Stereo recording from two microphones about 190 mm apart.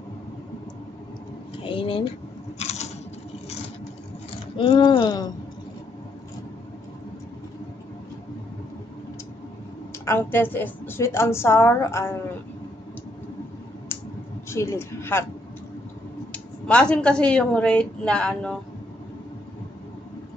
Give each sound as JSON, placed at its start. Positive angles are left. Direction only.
{"t": 1.6, "sound": "speech", "side_deg": 25}
{"t": 2.6, "sound": "a sound", "side_deg": 35}
{"t": 4.6, "sound": "speech", "side_deg": 25}
{"t": 9.9, "sound": "a woman's voice", "side_deg": 10}
{"t": 14.5, "sound": "a woman's voice", "side_deg": 15}
{"t": 16.3, "sound": "a woman's voice", "side_deg": 5}